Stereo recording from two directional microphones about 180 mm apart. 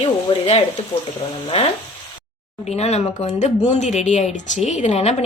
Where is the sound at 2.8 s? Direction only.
35° left (ahead or behind).